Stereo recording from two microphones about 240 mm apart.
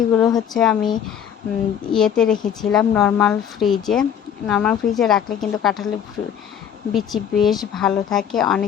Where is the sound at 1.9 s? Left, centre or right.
Centre.